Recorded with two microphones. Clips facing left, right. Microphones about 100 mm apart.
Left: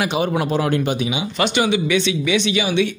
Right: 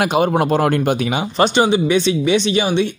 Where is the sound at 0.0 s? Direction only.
55° right (ahead or behind).